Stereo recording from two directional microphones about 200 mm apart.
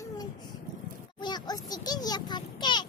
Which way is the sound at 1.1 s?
20° left (ahead or behind).